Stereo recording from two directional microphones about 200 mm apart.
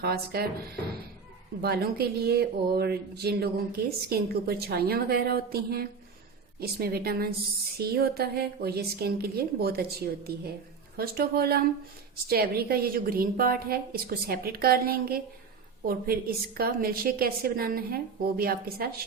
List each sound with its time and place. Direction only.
0.0 s speech: 50° right (ahead or behind)
1.6 s speech: 50° right (ahead or behind)